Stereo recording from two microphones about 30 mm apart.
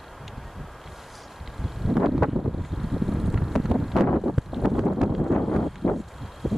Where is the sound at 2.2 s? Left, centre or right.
Right.